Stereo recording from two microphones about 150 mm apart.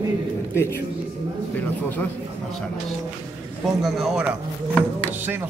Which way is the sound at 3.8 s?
Centre (ahead or behind).